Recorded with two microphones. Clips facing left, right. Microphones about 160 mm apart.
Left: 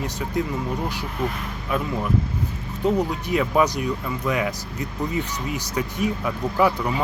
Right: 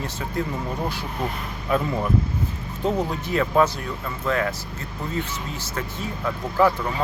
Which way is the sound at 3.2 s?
15° left (ahead or behind).